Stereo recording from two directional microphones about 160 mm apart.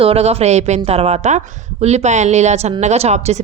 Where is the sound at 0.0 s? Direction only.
40° right (ahead or behind).